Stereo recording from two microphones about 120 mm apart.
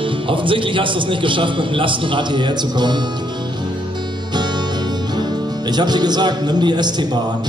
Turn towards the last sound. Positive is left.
turn(degrees=-35)  # may be behind; listen again after turning